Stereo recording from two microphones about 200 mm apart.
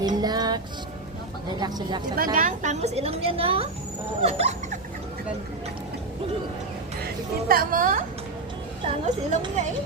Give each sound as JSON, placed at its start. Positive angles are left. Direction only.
{"t": 0.2, "sound": "music", "side_deg": -20}
{"t": 1.5, "sound": "speech", "side_deg": -20}
{"t": 2.1, "sound": "speech", "side_deg": -45}
{"t": 7.4, "sound": "a woman's voice", "side_deg": -45}